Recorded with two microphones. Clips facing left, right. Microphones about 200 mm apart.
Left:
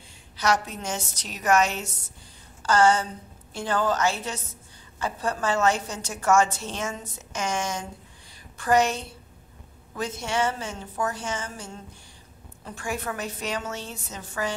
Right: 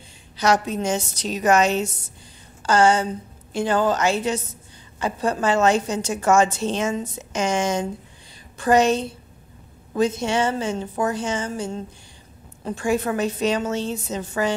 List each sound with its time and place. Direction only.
0.8 s a woman's voice: 20° right (ahead or behind)